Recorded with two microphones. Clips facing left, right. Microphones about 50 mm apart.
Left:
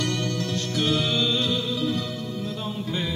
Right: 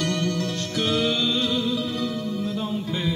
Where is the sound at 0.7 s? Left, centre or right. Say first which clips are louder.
Right 2 dB; centre.